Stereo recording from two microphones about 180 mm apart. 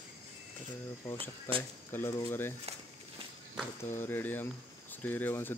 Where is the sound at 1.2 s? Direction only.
30° right (ahead or behind).